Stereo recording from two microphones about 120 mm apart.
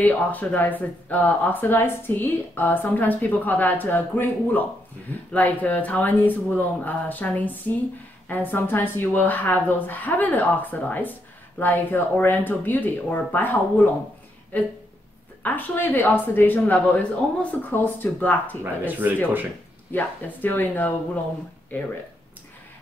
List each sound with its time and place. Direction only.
0.0 s speech: 15° left (ahead or behind)
18.6 s speech: 15° right (ahead or behind)
19.9 s speech: 15° left (ahead or behind)